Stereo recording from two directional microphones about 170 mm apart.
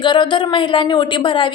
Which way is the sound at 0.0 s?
30° left (ahead or behind).